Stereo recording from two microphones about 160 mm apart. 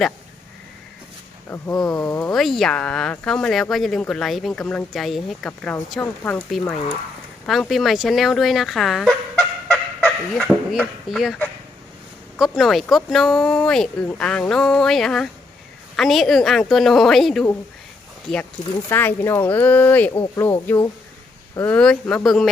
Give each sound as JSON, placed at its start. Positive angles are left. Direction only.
{"t": 2.0, "sound": "speech", "side_deg": 20}
{"t": 2.2, "sound": "speech", "side_deg": 0}
{"t": 5.5, "sound": "speech", "side_deg": 10}
{"t": 12.4, "sound": "speech", "side_deg": 0}
{"t": 18.9, "sound": "speech", "side_deg": 15}